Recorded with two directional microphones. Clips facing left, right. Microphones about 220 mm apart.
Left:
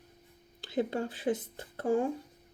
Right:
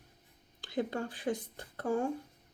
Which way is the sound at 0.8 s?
25° left (ahead or behind).